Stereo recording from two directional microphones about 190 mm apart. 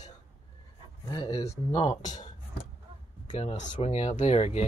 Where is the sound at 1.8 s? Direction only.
40° left (ahead or behind).